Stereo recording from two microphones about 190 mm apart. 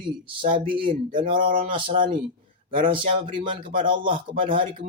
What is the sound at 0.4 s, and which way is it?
Speech, 30° right (ahead or behind).